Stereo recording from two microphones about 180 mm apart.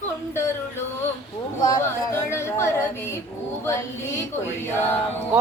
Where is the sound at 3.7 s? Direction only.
15° left (ahead or behind).